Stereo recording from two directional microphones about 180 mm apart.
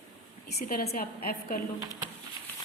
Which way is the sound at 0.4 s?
55° left (ahead or behind).